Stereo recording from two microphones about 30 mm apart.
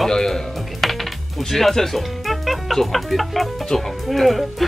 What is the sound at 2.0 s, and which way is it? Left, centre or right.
Speech, centre.